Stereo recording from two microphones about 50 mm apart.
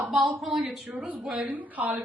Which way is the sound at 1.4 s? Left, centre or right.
Right.